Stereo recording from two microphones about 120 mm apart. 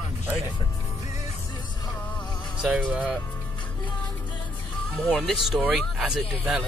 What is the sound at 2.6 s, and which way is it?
Speech, 10° right (ahead or behind).